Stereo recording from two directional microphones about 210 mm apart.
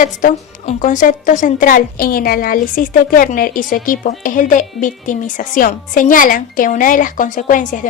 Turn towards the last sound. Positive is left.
turn(degrees=40)  # may be behind; listen again after turning